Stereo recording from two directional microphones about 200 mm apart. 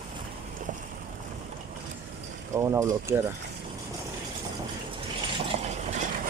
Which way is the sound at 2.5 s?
15° right (ahead or behind).